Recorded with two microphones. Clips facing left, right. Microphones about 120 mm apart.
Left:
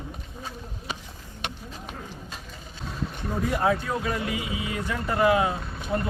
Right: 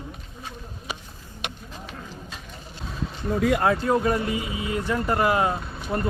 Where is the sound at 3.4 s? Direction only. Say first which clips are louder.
Right 3 dB; 85° right.